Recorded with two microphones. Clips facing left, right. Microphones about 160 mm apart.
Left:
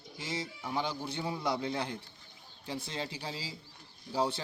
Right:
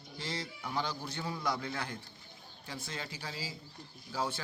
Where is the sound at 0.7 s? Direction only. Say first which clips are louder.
Left 2 dB; 20° left (ahead or behind).